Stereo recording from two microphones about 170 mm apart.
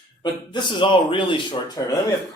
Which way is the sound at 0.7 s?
30° left (ahead or behind).